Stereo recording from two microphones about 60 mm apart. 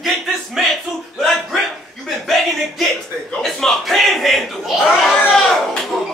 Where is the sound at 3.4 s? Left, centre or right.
Centre.